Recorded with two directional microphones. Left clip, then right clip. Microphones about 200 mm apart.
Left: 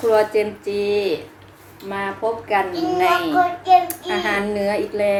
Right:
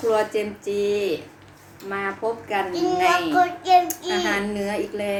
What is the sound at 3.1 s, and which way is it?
Child singing, 30° right (ahead or behind).